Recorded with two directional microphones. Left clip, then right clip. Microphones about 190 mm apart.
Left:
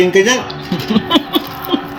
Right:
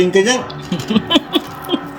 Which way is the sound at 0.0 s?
55° right (ahead or behind).